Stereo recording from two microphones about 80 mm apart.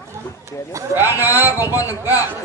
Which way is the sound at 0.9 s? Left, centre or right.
Right.